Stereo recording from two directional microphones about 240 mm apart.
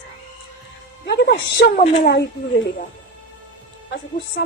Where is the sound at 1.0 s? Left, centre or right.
Left.